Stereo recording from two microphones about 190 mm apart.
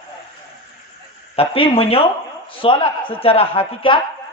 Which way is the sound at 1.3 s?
30° left (ahead or behind).